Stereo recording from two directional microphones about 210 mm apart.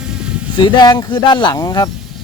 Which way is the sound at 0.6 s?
20° left (ahead or behind).